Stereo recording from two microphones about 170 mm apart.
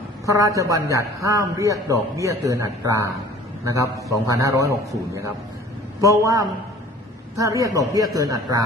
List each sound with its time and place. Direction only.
0.3 s a man's voice: 20° right (ahead or behind)